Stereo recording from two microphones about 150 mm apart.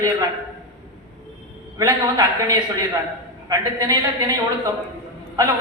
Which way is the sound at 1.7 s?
20° right (ahead or behind).